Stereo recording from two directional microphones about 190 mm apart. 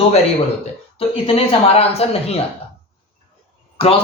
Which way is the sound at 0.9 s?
30° left (ahead or behind).